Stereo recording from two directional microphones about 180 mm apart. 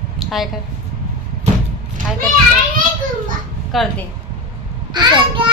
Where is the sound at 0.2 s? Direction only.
Centre (ahead or behind).